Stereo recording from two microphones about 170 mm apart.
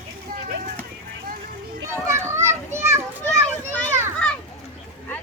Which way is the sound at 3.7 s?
10° left (ahead or behind).